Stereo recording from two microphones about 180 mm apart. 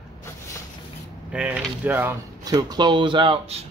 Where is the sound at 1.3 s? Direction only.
10° right (ahead or behind).